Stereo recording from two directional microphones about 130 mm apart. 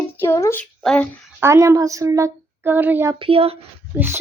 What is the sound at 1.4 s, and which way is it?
Speech, 20° right (ahead or behind).